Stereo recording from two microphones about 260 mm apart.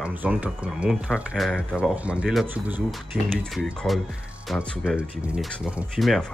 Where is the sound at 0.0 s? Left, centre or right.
Centre.